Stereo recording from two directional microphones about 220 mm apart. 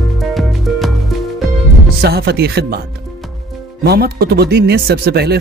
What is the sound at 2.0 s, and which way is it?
Speech, 45° right (ahead or behind).